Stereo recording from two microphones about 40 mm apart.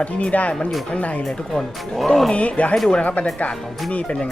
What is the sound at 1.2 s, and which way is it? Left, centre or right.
Speech, centre.